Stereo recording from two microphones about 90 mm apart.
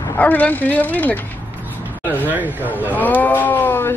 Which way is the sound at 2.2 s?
20° right (ahead or behind).